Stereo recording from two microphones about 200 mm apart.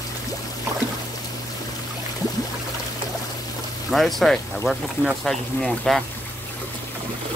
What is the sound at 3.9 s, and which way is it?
Speech, centre (ahead or behind).